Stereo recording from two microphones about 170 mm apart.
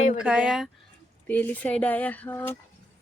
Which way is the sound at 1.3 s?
10° left (ahead or behind).